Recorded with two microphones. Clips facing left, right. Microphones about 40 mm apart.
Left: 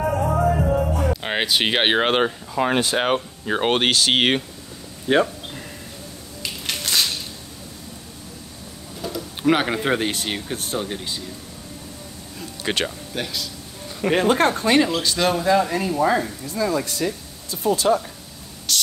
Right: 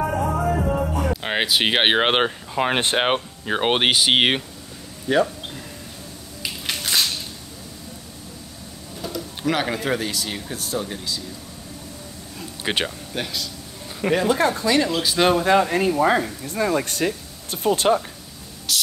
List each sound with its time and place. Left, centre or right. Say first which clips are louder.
0.0 s music: left 2 dB; centre
2.0 s speech: even; right
3.4 s speech: even; centre
5.0 s speech: left 1 dB; left
6.4 s music: even; centre
9.0 s vehicle: left 2 dB; centre
9.5 s speech: left 3 dB; left
12.6 s speech: even; centre
14.1 s speech: left 2 dB; left
15.1 s speech: right 4 dB; right
15.4 s speech: right 1 dB; right
17.8 s speech: even; right
18.7 s a sound: left 1 dB; centre